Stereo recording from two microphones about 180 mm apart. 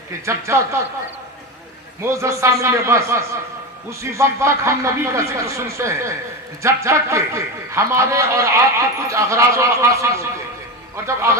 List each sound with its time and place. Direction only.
0.3 s a man's voice: 15° right (ahead or behind)
2.0 s a man's voice: 15° right (ahead or behind)